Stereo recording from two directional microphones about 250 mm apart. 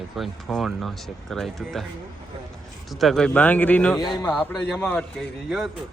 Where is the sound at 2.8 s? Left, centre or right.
Centre.